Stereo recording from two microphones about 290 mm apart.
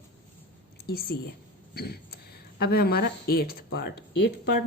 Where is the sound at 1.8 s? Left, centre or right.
Left.